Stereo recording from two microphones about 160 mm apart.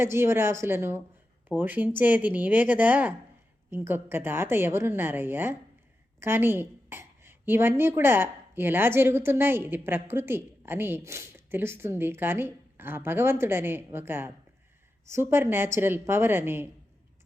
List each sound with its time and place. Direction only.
0.0 s a woman's voice: 15° right (ahead or behind)